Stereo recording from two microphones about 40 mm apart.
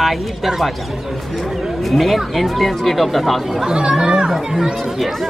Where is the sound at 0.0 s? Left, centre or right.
Centre.